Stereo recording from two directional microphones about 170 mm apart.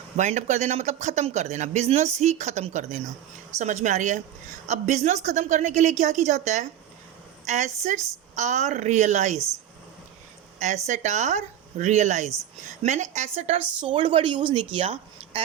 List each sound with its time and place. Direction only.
0.2 s a woman's voice: 45° right (ahead or behind)
10.8 s a woman's voice: 45° right (ahead or behind)
13.6 s speech: 10° right (ahead or behind)
13.8 s speech: 30° right (ahead or behind)